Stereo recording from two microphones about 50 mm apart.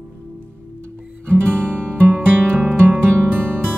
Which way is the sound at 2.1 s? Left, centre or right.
Right.